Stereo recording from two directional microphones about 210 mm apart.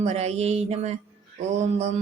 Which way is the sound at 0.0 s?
30° right (ahead or behind).